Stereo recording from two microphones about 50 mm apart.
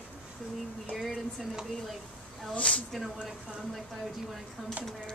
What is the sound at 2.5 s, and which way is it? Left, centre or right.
Speech, left.